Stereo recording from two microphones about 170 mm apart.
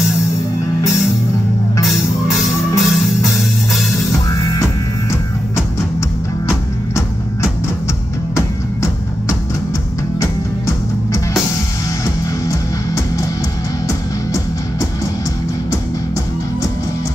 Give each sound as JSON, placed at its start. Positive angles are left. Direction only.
{"t": 1.9, "sound": "music", "side_deg": 0}
{"t": 4.1, "sound": "music", "side_deg": 20}
{"t": 12.4, "sound": "music", "side_deg": 20}